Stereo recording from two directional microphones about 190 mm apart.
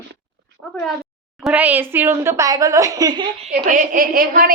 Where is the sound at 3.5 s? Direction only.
45° right (ahead or behind).